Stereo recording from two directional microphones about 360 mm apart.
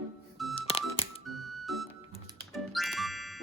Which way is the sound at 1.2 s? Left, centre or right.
Centre.